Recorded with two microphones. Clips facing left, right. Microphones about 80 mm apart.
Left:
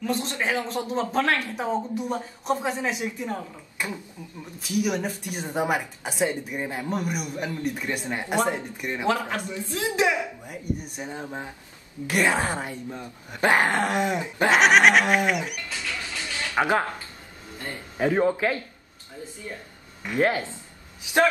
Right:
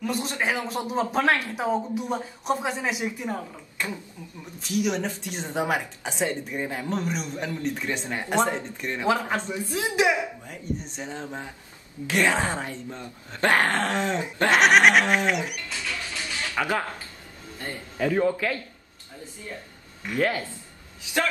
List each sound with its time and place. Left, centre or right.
0.0 s speech: centre
3.7 s a sound: centre
4.6 s speech: centre
9.0 s a woman's voice: centre
10.4 s speech: centre
14.5 s goat: centre
16.5 s a man's voice: left
20.1 s speech: left